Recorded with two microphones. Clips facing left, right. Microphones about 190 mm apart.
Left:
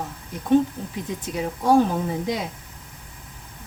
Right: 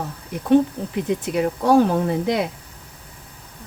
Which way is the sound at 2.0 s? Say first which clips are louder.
Right 5 dB; 70° right (ahead or behind).